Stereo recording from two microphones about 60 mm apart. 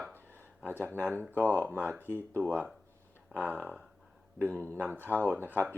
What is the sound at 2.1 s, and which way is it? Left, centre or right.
Speech, left.